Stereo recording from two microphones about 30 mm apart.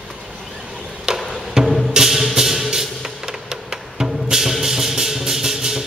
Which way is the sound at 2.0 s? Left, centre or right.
Centre.